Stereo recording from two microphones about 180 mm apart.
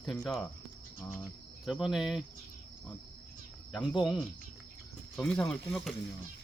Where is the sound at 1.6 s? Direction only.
Centre (ahead or behind).